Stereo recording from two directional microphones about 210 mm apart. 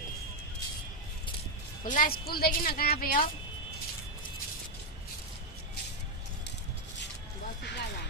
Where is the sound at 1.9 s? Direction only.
45° left (ahead or behind).